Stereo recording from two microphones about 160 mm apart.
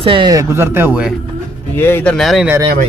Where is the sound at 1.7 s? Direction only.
15° left (ahead or behind).